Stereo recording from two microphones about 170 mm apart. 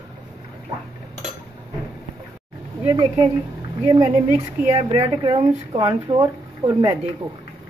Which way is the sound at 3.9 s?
25° right (ahead or behind).